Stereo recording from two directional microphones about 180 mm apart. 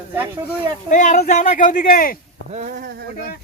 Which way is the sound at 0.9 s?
45° left (ahead or behind).